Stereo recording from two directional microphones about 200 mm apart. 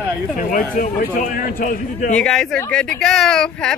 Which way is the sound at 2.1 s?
5° left (ahead or behind).